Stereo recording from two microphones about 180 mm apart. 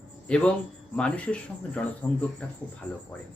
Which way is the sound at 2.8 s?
5° left (ahead or behind).